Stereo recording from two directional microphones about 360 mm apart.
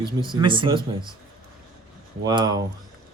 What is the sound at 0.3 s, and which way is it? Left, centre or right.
Speech, centre.